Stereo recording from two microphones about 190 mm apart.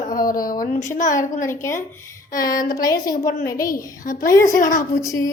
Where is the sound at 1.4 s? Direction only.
15° left (ahead or behind).